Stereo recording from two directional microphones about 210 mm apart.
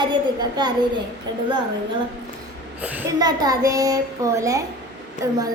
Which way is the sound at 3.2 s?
20° right (ahead or behind).